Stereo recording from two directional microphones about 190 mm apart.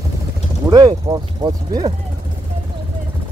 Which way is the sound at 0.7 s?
20° right (ahead or behind).